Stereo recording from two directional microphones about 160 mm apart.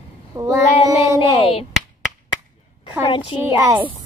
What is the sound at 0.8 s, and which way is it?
Music, 20° right (ahead or behind).